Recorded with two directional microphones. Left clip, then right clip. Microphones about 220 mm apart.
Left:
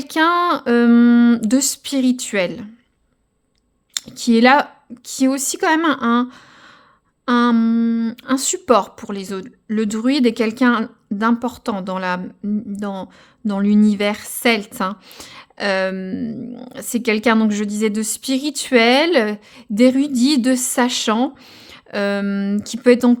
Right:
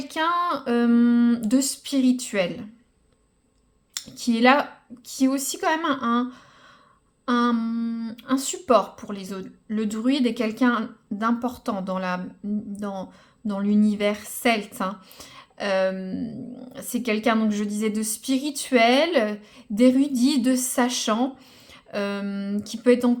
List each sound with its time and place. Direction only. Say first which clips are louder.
0.0 s speech: left 7 dB; 45° left (ahead or behind)
3.9 s speech: left 9 dB; 40° left (ahead or behind)